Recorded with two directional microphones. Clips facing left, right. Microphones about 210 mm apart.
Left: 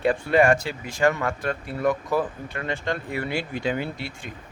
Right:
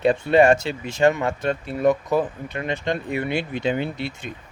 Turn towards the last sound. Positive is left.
turn(degrees=-20)  # may be behind; listen again after turning